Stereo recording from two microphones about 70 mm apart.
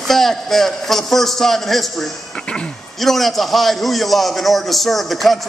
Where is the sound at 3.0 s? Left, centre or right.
Centre.